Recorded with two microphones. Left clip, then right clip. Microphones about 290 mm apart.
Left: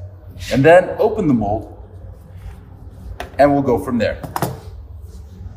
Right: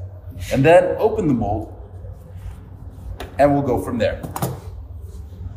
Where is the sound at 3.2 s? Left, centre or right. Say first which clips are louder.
Left 3 dB; left.